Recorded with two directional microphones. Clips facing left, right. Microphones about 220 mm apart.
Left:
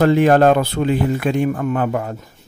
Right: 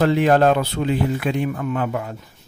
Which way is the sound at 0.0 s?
50° left (ahead or behind).